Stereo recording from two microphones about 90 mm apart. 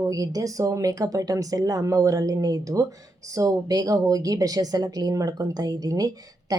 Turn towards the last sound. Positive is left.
turn(degrees=-45)  # may be behind; listen again after turning